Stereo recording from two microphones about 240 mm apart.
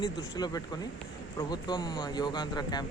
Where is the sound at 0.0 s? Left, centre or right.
Centre.